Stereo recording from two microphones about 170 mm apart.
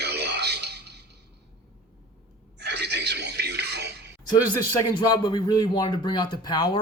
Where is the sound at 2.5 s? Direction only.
75° right (ahead or behind).